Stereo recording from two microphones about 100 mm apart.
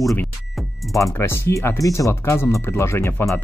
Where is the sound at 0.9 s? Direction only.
30° left (ahead or behind).